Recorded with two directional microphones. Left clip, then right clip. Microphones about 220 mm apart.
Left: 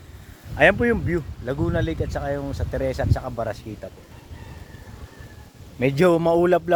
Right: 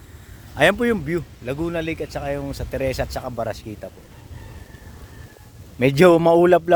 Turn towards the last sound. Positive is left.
turn(degrees=-35)  # may be behind; listen again after turning